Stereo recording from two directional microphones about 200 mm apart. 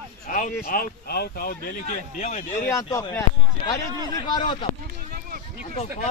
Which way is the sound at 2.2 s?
35° left (ahead or behind).